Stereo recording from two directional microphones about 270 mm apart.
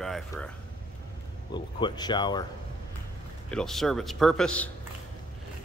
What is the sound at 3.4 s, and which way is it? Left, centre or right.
Speech, centre.